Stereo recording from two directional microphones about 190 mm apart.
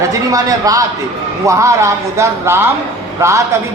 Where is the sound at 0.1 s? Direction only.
20° right (ahead or behind).